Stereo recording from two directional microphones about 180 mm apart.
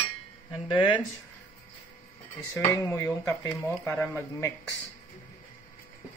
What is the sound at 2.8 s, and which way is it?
Speech, 10° left (ahead or behind).